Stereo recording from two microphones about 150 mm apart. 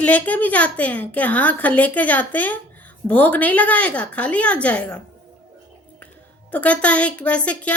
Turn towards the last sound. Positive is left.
turn(degrees=10)  # may be behind; listen again after turning